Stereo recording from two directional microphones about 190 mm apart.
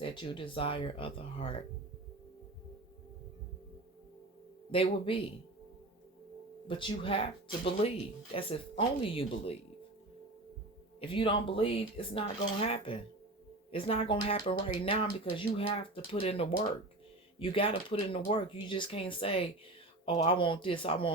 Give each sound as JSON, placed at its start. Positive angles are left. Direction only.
{"t": 0.0, "sound": "speech", "side_deg": 25}
{"t": 4.7, "sound": "speech", "side_deg": 30}
{"t": 6.7, "sound": "speech", "side_deg": 25}
{"t": 11.0, "sound": "speech", "side_deg": 25}